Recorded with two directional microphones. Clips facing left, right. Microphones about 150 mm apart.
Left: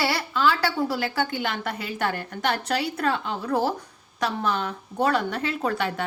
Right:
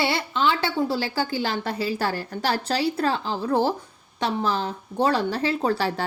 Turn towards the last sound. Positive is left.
turn(degrees=-30)  # may be behind; listen again after turning